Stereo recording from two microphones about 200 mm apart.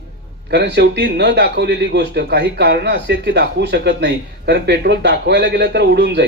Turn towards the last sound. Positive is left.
turn(degrees=-55)  # may be behind; listen again after turning